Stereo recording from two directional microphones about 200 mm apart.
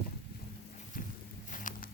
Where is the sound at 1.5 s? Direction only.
40° left (ahead or behind).